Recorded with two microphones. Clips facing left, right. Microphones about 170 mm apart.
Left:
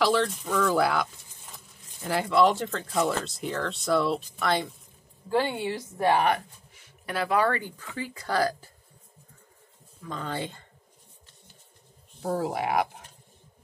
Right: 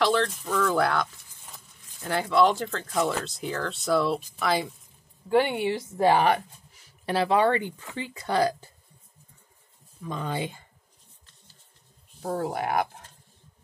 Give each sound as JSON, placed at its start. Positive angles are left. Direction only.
{"t": 0.0, "sound": "speech", "side_deg": 5}
{"t": 5.3, "sound": "speech", "side_deg": -15}
{"t": 10.0, "sound": "speech", "side_deg": -15}
{"t": 12.2, "sound": "speech", "side_deg": 0}